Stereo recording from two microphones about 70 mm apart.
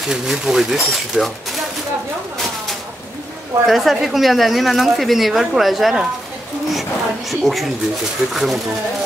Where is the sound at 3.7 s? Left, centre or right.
Centre.